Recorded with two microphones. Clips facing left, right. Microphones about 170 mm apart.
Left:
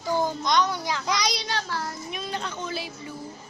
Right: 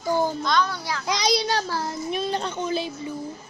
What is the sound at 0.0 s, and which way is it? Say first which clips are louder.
Speech: right 2 dB; 15° right (ahead or behind).